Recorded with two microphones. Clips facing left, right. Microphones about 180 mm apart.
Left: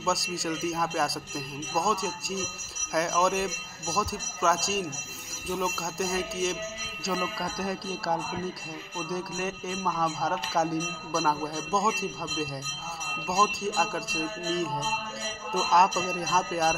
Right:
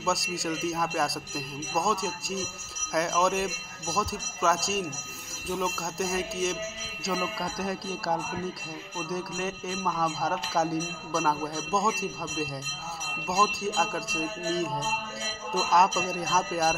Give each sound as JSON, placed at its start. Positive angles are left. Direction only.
{"t": 0.0, "sound": "speech", "side_deg": 0}